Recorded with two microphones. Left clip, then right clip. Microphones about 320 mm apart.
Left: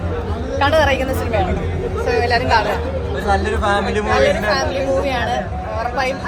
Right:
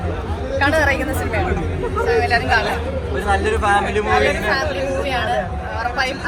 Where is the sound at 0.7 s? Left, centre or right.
Left.